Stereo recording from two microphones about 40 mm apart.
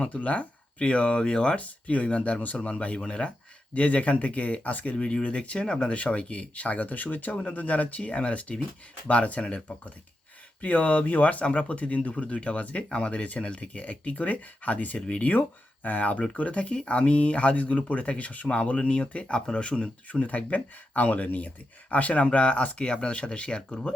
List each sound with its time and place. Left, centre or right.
0.1 s speech: left
1.5 s speech: left
4.9 s speech: left
10.6 s speech: left